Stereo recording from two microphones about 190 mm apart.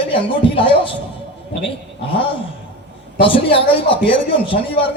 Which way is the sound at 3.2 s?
30° left (ahead or behind).